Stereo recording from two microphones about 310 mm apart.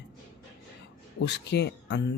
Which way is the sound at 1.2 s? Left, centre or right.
Left.